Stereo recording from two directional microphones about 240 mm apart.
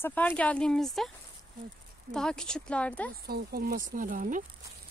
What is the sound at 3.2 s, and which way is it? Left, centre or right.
Speech, right.